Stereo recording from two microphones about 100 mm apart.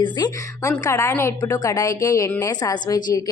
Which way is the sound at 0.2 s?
40° left (ahead or behind).